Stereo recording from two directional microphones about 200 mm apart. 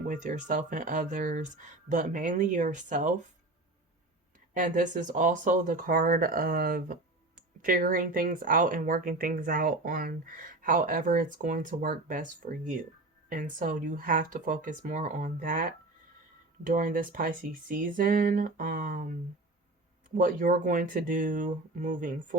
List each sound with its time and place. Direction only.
0.0 s speech: 40° right (ahead or behind)
4.5 s speech: 40° right (ahead or behind)